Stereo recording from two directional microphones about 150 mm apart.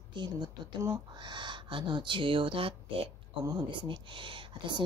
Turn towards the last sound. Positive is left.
turn(degrees=-35)  # may be behind; listen again after turning